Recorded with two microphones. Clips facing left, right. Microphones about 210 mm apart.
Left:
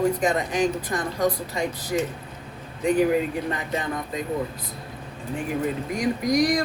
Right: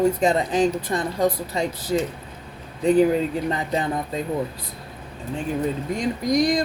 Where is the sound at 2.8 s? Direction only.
30° right (ahead or behind).